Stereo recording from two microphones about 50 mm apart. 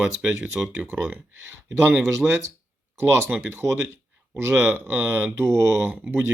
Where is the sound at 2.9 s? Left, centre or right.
Right.